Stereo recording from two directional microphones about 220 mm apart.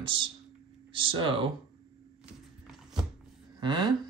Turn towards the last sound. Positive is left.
turn(degrees=-20)  # may be behind; listen again after turning